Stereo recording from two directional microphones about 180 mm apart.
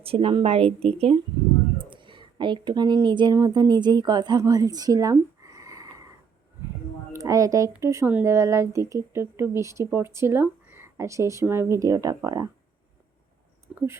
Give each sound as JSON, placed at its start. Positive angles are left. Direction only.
{"t": 0.0, "sound": "a woman's voice", "side_deg": -30}
{"t": 7.1, "sound": "a woman's voice", "side_deg": -20}
{"t": 13.7, "sound": "a sound", "side_deg": -5}